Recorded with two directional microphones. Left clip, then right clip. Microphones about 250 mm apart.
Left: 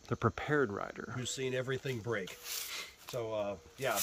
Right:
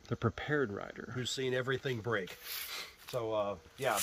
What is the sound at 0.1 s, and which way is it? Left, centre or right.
Speech, centre.